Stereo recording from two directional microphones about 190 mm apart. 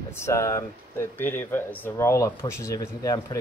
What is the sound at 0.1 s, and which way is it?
Speech, 15° left (ahead or behind).